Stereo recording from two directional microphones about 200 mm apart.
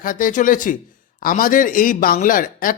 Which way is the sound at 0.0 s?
45° left (ahead or behind).